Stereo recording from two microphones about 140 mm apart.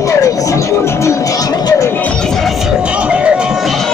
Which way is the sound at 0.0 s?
25° left (ahead or behind).